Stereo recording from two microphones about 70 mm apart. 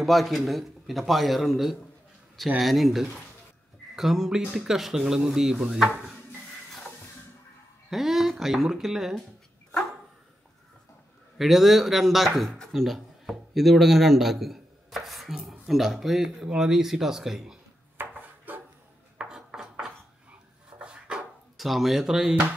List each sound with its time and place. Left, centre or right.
0.0 s speech: centre
7.9 s speech: centre
11.3 s speech: centre
12.7 s a sound: centre
15.6 s speech: centre
17.9 s dishes: right
19.1 s a sound: centre
21.5 s speech: centre